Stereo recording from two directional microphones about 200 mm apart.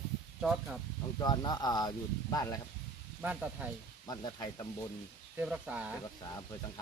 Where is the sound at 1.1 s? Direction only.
20° left (ahead or behind).